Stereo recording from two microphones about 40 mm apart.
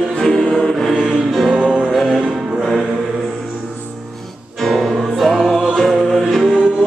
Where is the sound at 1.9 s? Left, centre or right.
Centre.